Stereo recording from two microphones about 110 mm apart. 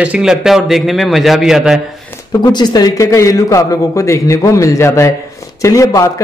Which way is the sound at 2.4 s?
40° left (ahead or behind).